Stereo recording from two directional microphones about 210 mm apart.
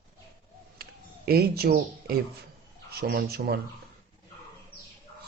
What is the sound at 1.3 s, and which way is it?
Speech, 45° right (ahead or behind).